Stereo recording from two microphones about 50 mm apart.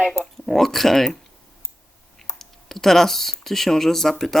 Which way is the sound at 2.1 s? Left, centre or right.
Centre.